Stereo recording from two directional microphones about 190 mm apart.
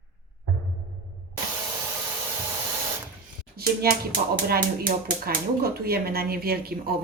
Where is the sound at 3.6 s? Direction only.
55° right (ahead or behind).